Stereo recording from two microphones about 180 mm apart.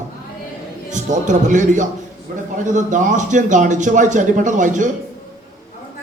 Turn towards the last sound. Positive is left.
turn(degrees=-45)  # may be behind; listen again after turning